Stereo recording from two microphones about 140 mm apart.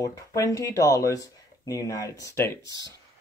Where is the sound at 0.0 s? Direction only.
25° left (ahead or behind).